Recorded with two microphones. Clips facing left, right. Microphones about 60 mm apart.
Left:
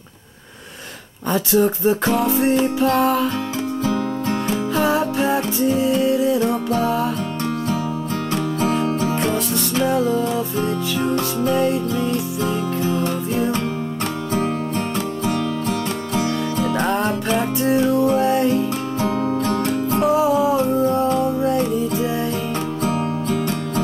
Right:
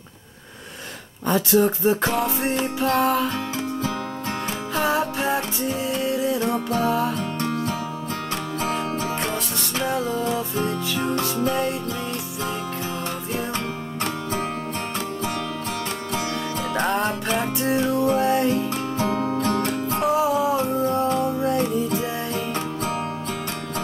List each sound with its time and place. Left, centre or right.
2.2 s music: centre
2.9 s music: right
3.9 s music: centre
8.3 s music: right
10.1 s music: centre
11.1 s music: centre
15.0 s music: right
16.7 s music: centre
17.6 s music: right
18.5 s music: centre
19.4 s music: right
20.1 s music: centre
22.8 s music: right